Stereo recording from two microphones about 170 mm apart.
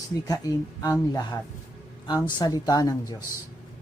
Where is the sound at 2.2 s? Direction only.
20° left (ahead or behind).